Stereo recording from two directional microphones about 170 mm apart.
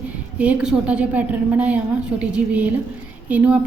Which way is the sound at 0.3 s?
5° right (ahead or behind).